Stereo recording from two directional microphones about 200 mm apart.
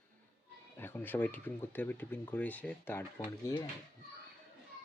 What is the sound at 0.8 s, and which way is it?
Speech, 10° left (ahead or behind).